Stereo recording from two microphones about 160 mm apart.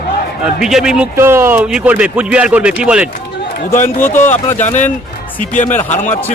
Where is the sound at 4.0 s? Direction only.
15° left (ahead or behind).